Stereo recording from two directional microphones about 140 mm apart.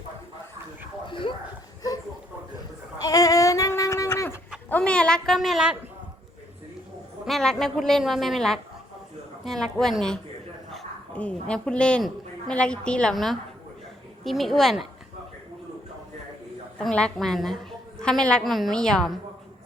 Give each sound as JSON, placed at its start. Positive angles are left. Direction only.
{"t": 1.0, "sound": "dog", "side_deg": 35}
{"t": 3.0, "sound": "a sound", "side_deg": 25}
{"t": 4.7, "sound": "a woman's voice", "side_deg": 5}
{"t": 7.3, "sound": "a woman's voice", "side_deg": 0}
{"t": 16.7, "sound": "a woman's voice", "side_deg": 5}